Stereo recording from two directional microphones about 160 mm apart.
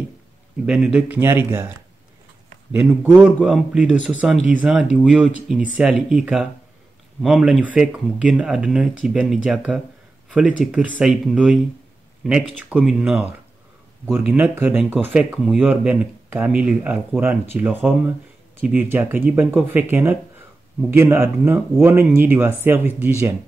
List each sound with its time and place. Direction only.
0.7 s speech: 5° right (ahead or behind)
2.7 s speech: 10° right (ahead or behind)